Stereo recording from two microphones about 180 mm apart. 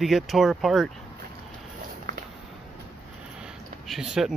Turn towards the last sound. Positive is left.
turn(degrees=-5)  # may be behind; listen again after turning